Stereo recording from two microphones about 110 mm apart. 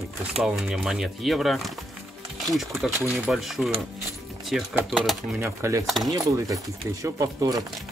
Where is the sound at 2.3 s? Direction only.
Centre (ahead or behind).